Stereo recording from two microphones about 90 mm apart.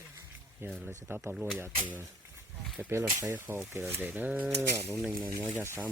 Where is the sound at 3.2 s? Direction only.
20° right (ahead or behind).